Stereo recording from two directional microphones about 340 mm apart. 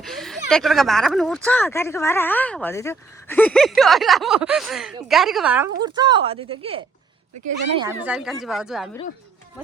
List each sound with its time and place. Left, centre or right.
0.0 s speech: centre